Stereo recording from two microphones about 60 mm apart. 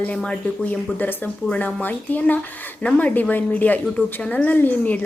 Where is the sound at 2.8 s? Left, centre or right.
Left.